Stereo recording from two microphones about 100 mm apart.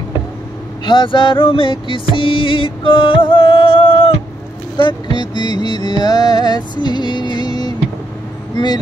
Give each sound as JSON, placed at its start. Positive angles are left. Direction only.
{"t": 0.8, "sound": "music", "side_deg": 55}
{"t": 4.7, "sound": "music", "side_deg": 50}